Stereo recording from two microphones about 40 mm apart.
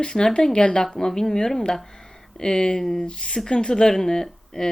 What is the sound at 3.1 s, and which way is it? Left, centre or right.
Speech, left.